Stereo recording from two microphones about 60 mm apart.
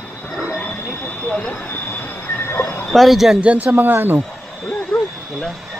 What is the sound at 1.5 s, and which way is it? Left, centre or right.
Vehicle, left.